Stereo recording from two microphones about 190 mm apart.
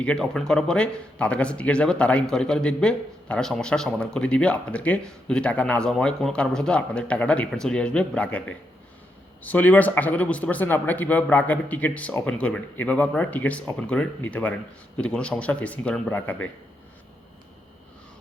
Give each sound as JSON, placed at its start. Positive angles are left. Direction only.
{"t": 0.0, "sound": "a man's voice", "side_deg": 5}